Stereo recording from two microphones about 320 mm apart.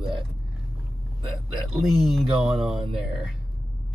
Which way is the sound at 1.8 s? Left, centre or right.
Centre.